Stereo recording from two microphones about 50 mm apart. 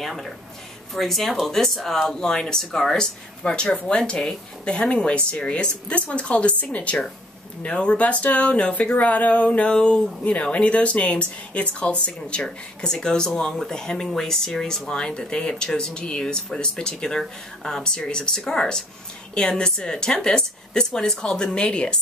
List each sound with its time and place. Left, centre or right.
0.0 s speech: centre; by 21.9 s left